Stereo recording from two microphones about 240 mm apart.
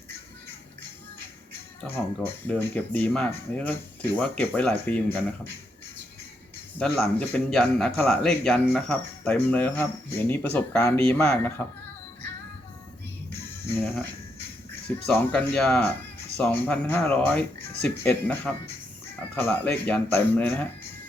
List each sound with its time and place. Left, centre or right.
1.8 s a man's voice: centre
6.7 s a man's voice: centre
14.8 s a man's voice: centre